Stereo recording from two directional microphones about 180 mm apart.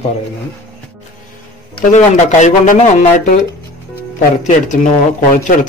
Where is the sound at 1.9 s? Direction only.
40° left (ahead or behind).